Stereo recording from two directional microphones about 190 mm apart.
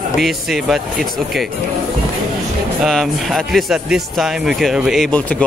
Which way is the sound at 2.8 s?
Centre (ahead or behind).